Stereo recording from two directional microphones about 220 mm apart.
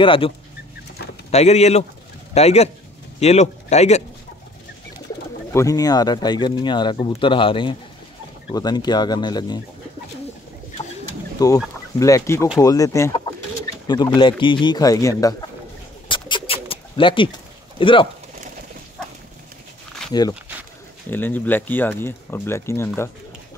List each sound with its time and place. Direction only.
0.0 s speech: 25° left (ahead or behind)
1.3 s speech: 30° left (ahead or behind)
5.5 s speech: 15° left (ahead or behind)
11.3 s speech: 15° left (ahead or behind)
16.1 s bird: 20° left (ahead or behind)
17.7 s speech: 25° left (ahead or behind)
20.1 s speech: 20° left (ahead or behind)